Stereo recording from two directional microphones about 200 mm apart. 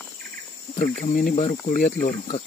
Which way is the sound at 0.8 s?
40° left (ahead or behind).